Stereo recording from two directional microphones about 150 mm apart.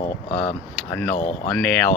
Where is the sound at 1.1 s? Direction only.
60° left (ahead or behind).